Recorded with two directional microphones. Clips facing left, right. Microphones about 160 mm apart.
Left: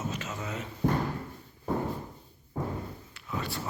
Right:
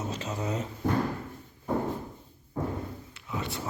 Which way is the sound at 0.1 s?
35° right (ahead or behind).